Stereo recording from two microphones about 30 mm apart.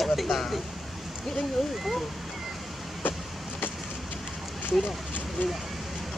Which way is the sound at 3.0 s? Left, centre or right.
Left.